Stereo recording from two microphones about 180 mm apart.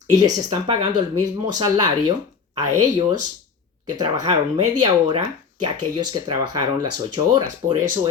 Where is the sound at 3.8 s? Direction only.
20° right (ahead or behind).